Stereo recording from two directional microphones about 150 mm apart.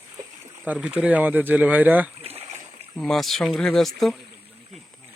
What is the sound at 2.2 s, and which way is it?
Boat, 40° right (ahead or behind).